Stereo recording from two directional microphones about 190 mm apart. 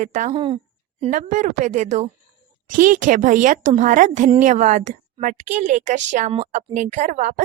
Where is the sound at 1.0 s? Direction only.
40° right (ahead or behind).